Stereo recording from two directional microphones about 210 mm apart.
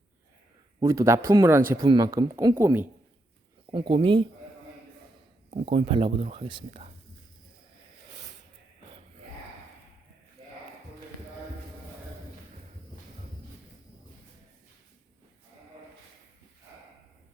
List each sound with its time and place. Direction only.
0.8 s speech: 15° right (ahead or behind)
3.7 s speech: 25° right (ahead or behind)
5.5 s speech: 30° right (ahead or behind)